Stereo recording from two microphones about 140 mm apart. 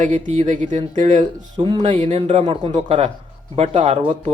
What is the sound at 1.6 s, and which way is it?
Speech, 35° right (ahead or behind).